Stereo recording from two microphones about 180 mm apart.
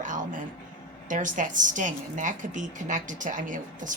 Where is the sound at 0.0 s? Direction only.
45° right (ahead or behind).